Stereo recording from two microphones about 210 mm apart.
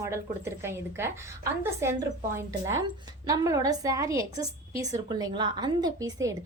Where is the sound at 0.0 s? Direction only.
15° right (ahead or behind).